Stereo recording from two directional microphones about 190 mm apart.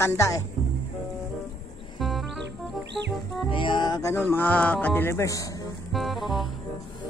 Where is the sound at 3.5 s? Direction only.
25° left (ahead or behind).